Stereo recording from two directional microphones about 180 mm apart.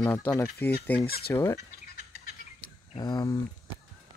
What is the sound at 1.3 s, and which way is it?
Speech, 15° left (ahead or behind).